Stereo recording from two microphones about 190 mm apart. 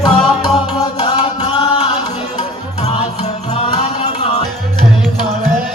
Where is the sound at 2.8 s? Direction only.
35° left (ahead or behind).